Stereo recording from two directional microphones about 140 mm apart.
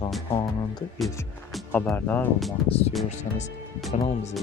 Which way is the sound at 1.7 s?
10° left (ahead or behind).